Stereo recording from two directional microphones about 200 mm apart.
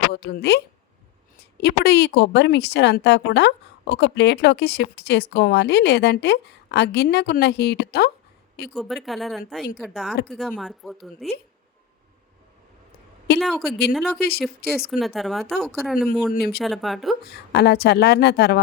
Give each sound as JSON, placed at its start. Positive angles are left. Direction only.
{"t": 0.1, "sound": "a woman's voice", "side_deg": 50}
{"t": 1.6, "sound": "speech", "side_deg": 55}
{"t": 8.7, "sound": "speech", "side_deg": 0}
{"t": 13.4, "sound": "speech", "side_deg": 0}
{"t": 14.2, "sound": "a woman's voice", "side_deg": 50}
{"t": 14.8, "sound": "speech", "side_deg": 0}
{"t": 16.3, "sound": "a woman's voice", "side_deg": 50}
{"t": 16.6, "sound": "speech", "side_deg": 0}
{"t": 17.2, "sound": "speech", "side_deg": 55}